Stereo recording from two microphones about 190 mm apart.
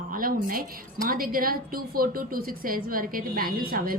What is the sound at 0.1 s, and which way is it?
A woman's voice, 45° right (ahead or behind).